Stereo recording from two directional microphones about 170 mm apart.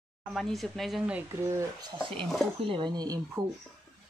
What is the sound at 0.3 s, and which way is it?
Speech, centre (ahead or behind).